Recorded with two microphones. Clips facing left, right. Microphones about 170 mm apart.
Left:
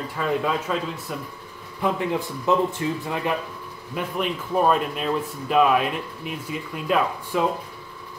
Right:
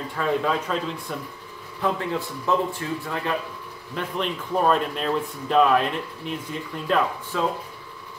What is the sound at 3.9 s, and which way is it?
Speech, 5° left (ahead or behind).